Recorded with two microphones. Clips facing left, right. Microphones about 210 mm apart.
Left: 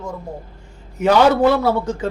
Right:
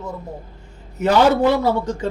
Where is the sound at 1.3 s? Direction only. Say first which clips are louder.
Left 1 dB; 10° right (ahead or behind).